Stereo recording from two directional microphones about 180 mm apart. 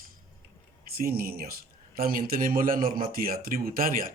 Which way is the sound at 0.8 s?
55° right (ahead or behind).